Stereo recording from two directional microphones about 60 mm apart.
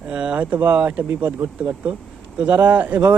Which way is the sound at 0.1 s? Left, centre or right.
Centre.